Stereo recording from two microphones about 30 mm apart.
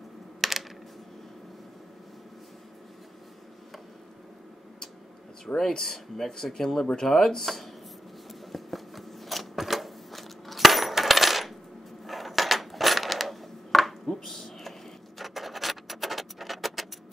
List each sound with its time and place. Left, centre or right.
0.4 s typing: centre
5.5 s speech: left
5.9 s speech: centre
8.3 s sewing machine: centre
12.1 s a sound: centre